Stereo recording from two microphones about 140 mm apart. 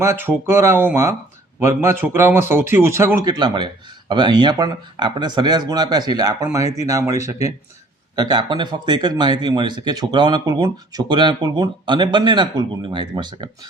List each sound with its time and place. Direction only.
0.0 s a man's voice: 15° right (ahead or behind)